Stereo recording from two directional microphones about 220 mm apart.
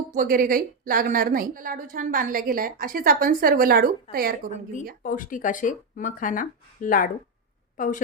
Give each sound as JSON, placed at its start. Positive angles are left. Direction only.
{"t": 0.1, "sound": "a woman's voice", "side_deg": -40}
{"t": 5.0, "sound": "speech", "side_deg": 35}